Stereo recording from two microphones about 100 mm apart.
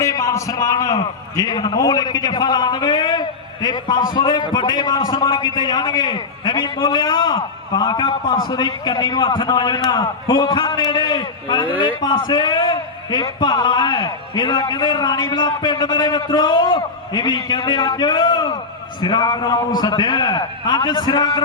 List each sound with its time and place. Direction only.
0.0 s a man's voice: 30° left (ahead or behind)